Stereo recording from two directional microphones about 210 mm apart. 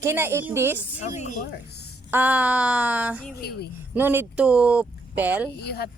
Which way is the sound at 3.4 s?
50° left (ahead or behind).